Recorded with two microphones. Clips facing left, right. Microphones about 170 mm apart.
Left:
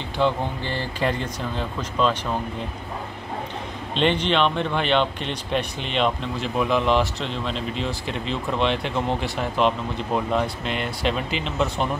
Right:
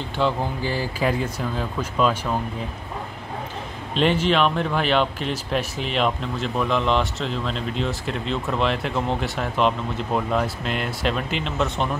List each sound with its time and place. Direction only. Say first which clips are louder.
0.2 s speech: even; 5° right (ahead or behind)
3.9 s speech: right 1 dB; 5° right (ahead or behind)